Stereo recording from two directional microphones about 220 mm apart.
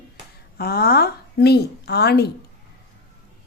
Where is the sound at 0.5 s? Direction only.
45° left (ahead or behind).